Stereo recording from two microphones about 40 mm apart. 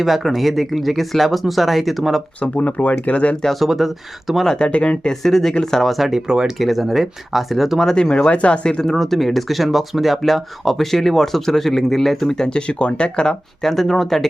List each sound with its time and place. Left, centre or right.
0.0 s speech: centre
2.4 s speech: left
3.5 s speech: centre
4.5 s speech: left
5.0 s speech: centre
6.1 s speech: centre
6.6 s speech: centre
7.9 s speech: left
8.9 s speech: centre
12.4 s speech: left
13.6 s speech: centre